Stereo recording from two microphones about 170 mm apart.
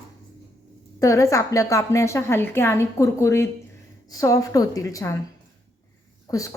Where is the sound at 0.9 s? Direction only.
20° left (ahead or behind).